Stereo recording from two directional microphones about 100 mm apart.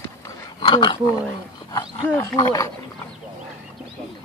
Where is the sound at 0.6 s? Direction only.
55° left (ahead or behind).